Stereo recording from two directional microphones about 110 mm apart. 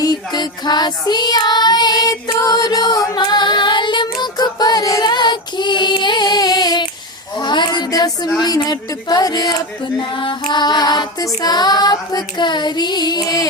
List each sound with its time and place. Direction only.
0.0 s child singing: 35° left (ahead or behind)
7.3 s a sound: 40° left (ahead or behind)
8.4 s child singing: 35° left (ahead or behind)